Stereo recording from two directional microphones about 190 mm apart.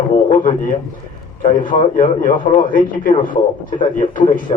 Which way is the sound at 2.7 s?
50° left (ahead or behind).